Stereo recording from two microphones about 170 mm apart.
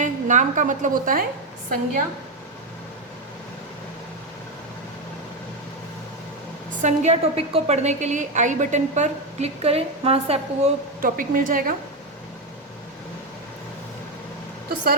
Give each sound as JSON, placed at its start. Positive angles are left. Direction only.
{"t": 0.0, "sound": "a woman's voice", "side_deg": -45}
{"t": 6.8, "sound": "a woman's voice", "side_deg": -40}
{"t": 11.0, "sound": "a woman's voice", "side_deg": -55}